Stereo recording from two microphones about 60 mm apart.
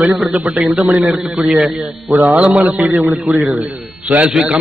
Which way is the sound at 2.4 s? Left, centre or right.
Centre.